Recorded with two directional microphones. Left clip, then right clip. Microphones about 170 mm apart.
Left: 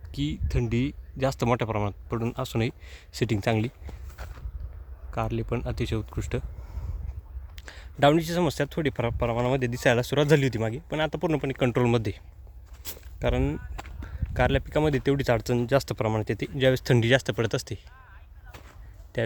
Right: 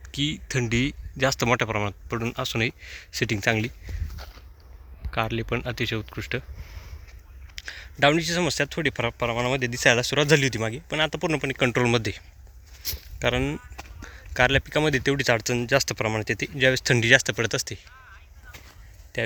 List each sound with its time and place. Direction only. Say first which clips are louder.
0.1 s speech: right 5 dB; centre (ahead or behind)
5.1 s speech: right 3 dB; 5° left (ahead or behind)
7.5 s speech: right 8 dB; 25° left (ahead or behind); by 12.2 s 5° left (ahead or behind)
12.8 s walk: right 4 dB; 5° left (ahead or behind)
14.3 s speech: right 4 dB; 5° left (ahead or behind)
19.1 s speech: right 1 dB; 25° left (ahead or behind)